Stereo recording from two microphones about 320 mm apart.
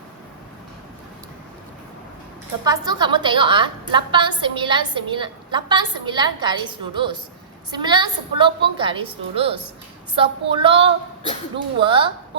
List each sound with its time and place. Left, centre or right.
2.6 s a woman's voice: centre